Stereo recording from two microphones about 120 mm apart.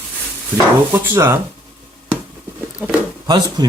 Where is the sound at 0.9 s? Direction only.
20° right (ahead or behind).